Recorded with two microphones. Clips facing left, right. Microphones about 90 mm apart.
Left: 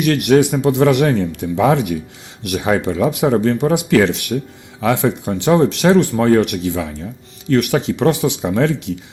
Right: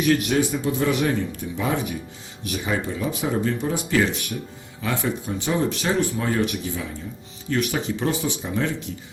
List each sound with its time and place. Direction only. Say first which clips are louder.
0.0 s speech: left 7 dB; 75° left (ahead or behind)